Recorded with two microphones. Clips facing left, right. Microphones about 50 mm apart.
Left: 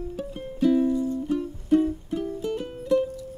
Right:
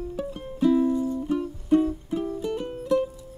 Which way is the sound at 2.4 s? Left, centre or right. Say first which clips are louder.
Even; centre.